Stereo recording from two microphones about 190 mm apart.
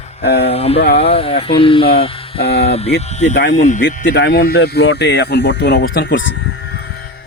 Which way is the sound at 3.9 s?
65° left (ahead or behind).